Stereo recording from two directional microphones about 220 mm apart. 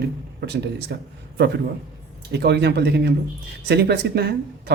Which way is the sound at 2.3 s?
50° right (ahead or behind).